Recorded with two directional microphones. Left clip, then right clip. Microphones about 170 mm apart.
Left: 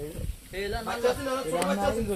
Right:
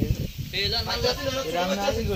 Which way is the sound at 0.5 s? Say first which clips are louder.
Right 6 dB; 15° left (ahead or behind).